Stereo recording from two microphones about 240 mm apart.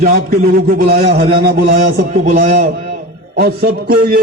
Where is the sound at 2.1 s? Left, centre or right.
Right.